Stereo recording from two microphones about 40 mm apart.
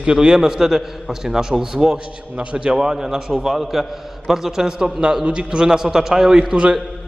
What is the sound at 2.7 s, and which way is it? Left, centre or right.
Speech, centre.